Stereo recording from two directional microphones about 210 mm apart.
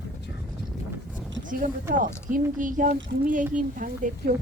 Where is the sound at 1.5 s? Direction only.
40° right (ahead or behind).